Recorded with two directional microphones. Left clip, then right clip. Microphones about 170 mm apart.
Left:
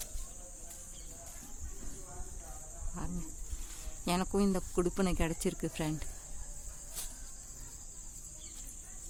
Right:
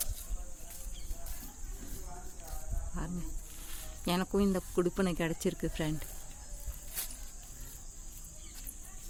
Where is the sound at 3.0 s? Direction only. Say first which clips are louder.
Right 2 dB; 5° right (ahead or behind).